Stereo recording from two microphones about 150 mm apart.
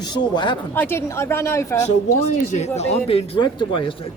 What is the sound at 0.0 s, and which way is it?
Speech, 30° left (ahead or behind).